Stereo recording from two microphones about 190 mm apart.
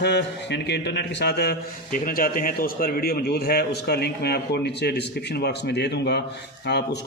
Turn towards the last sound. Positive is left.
turn(degrees=60)  # may be behind; listen again after turning